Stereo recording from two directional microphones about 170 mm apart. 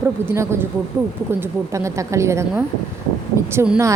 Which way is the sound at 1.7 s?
20° right (ahead or behind).